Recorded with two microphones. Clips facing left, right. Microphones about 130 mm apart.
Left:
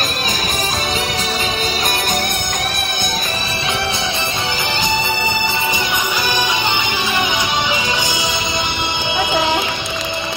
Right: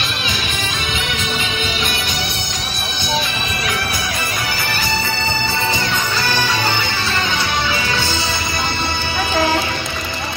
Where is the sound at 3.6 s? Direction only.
25° left (ahead or behind).